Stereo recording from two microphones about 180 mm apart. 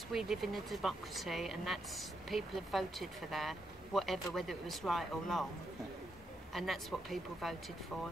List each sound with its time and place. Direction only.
0.1 s speech: centre (ahead or behind)
6.5 s speech: centre (ahead or behind)